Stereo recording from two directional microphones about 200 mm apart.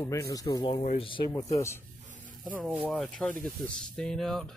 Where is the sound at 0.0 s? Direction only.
15° left (ahead or behind).